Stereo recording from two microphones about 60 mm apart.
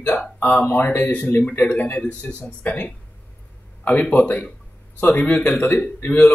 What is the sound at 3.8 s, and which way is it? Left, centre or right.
Speech, left.